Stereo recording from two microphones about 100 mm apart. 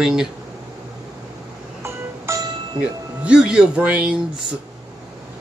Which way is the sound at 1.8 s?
30° right (ahead or behind).